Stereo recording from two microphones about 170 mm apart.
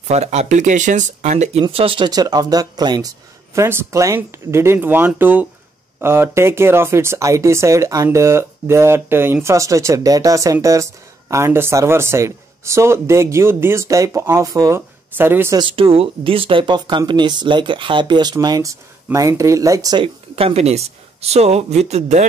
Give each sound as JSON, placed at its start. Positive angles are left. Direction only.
{"t": 0.1, "sound": "speech", "side_deg": -40}
{"t": 15.5, "sound": "speech", "side_deg": -30}